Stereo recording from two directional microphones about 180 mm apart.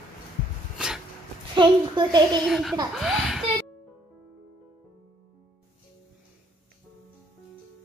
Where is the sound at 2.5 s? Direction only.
Centre (ahead or behind).